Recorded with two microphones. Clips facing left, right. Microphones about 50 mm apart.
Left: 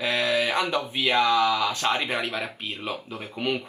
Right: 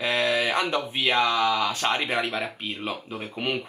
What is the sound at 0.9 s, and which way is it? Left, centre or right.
Speech, centre.